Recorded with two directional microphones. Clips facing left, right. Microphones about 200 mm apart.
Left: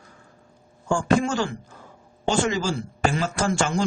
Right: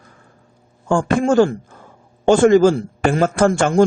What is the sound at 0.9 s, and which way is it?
Speech, 55° right (ahead or behind).